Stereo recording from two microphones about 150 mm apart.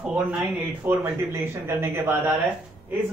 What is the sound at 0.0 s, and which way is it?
Speech, 5° right (ahead or behind).